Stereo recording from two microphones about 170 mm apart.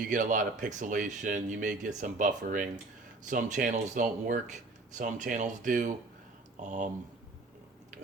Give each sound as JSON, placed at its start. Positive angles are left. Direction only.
{"t": 0.1, "sound": "speech", "side_deg": -50}